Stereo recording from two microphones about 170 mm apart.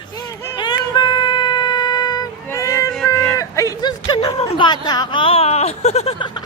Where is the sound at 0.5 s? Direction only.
25° left (ahead or behind).